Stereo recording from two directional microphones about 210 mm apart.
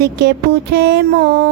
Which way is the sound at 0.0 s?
50° right (ahead or behind).